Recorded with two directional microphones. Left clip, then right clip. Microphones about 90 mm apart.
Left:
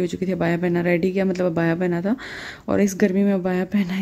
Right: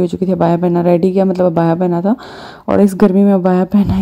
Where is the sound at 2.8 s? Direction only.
50° right (ahead or behind).